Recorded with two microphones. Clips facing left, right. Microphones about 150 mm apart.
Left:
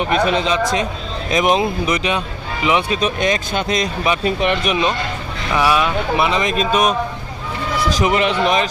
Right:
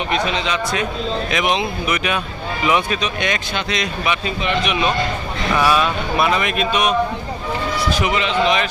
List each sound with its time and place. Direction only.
0.1 s speech: 45° left (ahead or behind)
2.6 s speech: 20° left (ahead or behind)
3.0 s speech: 45° left (ahead or behind)
4.4 s speech: 55° left (ahead or behind)
4.7 s speech: 30° left (ahead or behind)
5.5 s speech: 15° left (ahead or behind)
6.6 s speech: 45° left (ahead or behind)
8.1 s speech: 55° left (ahead or behind)